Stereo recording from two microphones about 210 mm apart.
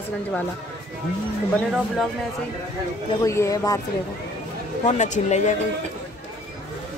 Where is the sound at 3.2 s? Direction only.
15° left (ahead or behind).